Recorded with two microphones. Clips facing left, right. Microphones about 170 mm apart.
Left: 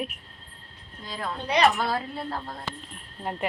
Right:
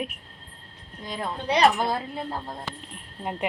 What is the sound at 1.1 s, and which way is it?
Speech, 20° right (ahead or behind).